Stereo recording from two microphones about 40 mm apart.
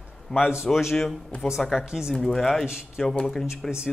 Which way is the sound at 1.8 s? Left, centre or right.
Centre.